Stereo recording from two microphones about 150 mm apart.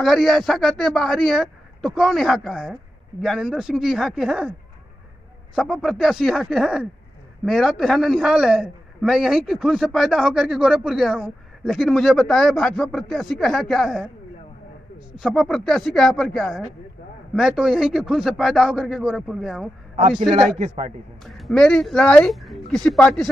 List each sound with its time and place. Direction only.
0.0 s a man's voice: centre (ahead or behind)
15.1 s a man's voice: centre (ahead or behind)
20.1 s a man's voice: 35° right (ahead or behind)
20.5 s a man's voice: 45° right (ahead or behind)
21.3 s a man's voice: centre (ahead or behind)